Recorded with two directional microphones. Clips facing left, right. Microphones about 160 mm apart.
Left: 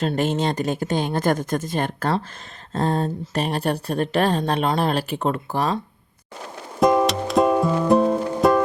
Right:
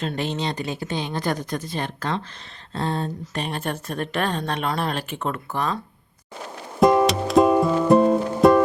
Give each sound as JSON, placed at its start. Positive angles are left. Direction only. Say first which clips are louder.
{"t": 0.0, "sound": "speech", "louder": "left 5 dB", "side_deg": 45}
{"t": 6.7, "sound": "music", "louder": "right 1 dB", "side_deg": 0}